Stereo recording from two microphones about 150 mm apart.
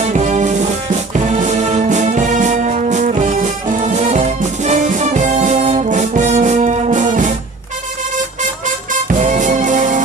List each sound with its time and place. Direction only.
0.0 s music: 50° right (ahead or behind)
8.6 s music: 55° right (ahead or behind)